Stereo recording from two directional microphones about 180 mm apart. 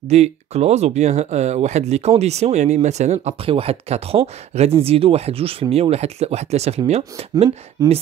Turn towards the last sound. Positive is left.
turn(degrees=-20)  # may be behind; listen again after turning